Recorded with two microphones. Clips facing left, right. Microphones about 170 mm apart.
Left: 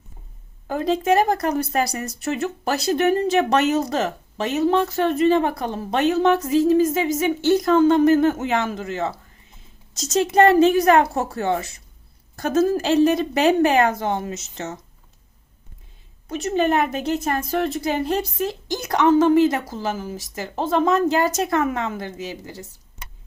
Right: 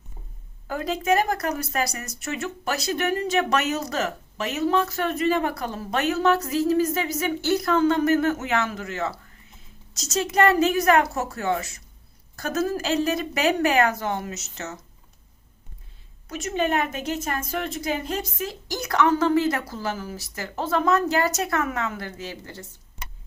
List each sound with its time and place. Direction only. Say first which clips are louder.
0.7 s speech: left 4 dB; 25° left (ahead or behind)
9.9 s a woman's voice: left 6 dB; 50° left (ahead or behind)
10.2 s speech: left 5 dB; 25° left (ahead or behind)
16.3 s speech: left 4 dB; 35° left (ahead or behind)
18.7 s speech: left 4 dB; 25° left (ahead or behind)